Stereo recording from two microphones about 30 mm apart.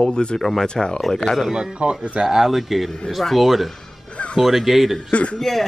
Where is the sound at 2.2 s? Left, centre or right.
Centre.